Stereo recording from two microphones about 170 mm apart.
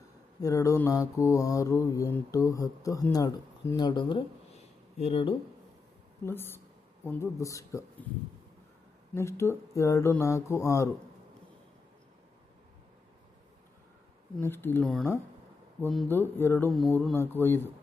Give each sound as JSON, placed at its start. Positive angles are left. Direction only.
{"t": 0.4, "sound": "mantra", "side_deg": 20}
{"t": 6.2, "sound": "speech", "side_deg": 15}
{"t": 9.1, "sound": "speech", "side_deg": 15}
{"t": 14.4, "sound": "speech", "side_deg": 15}
{"t": 14.8, "sound": "speech", "side_deg": 0}
{"t": 16.0, "sound": "speech", "side_deg": 15}